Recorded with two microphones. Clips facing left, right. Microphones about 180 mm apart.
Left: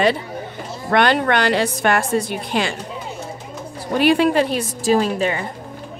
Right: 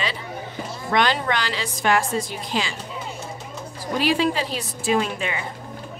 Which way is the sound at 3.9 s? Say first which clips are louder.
Left 6 dB; 60° left (ahead or behind).